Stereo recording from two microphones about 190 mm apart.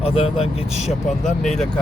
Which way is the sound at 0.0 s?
30° left (ahead or behind).